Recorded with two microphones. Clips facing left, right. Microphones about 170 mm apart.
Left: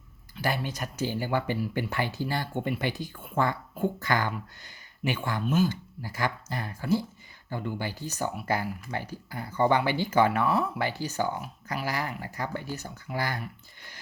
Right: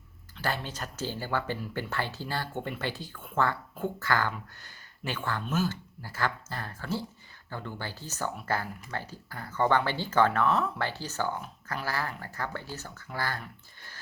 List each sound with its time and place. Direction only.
0.3 s speech: 15° left (ahead or behind)